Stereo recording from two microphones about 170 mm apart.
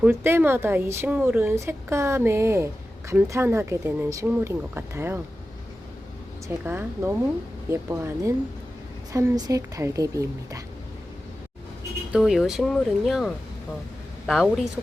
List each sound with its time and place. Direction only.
0.0 s a woman's voice: 15° right (ahead or behind)
6.7 s a woman's voice: 15° right (ahead or behind)
12.1 s speech: centre (ahead or behind)